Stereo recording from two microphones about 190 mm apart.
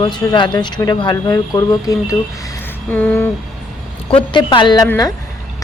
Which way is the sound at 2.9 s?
10° left (ahead or behind).